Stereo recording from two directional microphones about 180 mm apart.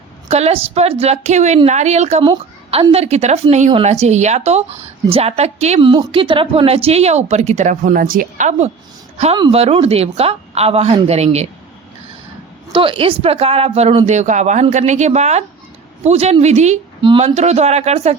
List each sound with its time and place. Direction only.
0.3 s a woman's voice: 35° right (ahead or behind)
12.7 s speech: 30° right (ahead or behind)